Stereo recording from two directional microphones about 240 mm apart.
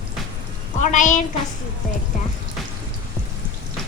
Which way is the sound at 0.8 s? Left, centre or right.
Left.